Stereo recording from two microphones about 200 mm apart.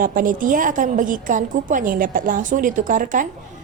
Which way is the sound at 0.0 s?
45° right (ahead or behind).